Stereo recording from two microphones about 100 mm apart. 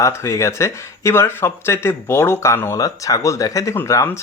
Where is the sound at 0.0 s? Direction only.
30° left (ahead or behind).